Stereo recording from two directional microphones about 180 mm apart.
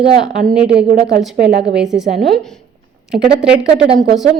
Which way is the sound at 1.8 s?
Centre (ahead or behind).